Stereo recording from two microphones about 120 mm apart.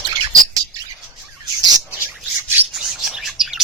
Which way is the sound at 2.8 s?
5° right (ahead or behind).